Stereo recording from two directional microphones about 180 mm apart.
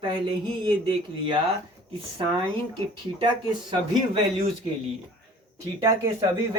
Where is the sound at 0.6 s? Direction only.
25° right (ahead or behind).